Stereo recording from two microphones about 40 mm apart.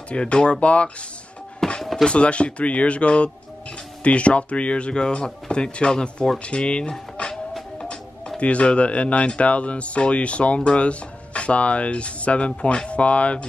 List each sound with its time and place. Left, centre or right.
0.1 s speech: left
1.8 s a sound: centre
2.0 s speech: left
6.4 s dishes: left
8.4 s speech: left